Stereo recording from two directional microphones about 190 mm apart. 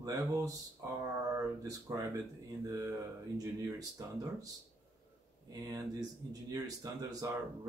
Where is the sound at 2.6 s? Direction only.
15° right (ahead or behind).